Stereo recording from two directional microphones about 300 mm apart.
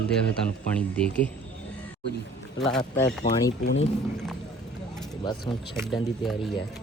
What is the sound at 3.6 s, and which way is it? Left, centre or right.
Speech, left.